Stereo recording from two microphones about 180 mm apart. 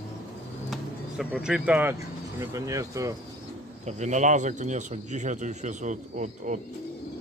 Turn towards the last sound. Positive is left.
turn(degrees=-45)  # may be behind; listen again after turning